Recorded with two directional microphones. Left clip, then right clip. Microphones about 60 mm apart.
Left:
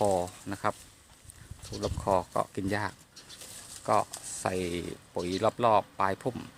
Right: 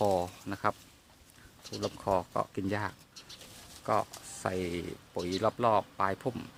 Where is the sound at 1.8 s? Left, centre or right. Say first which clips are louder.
Left 3 dB; centre.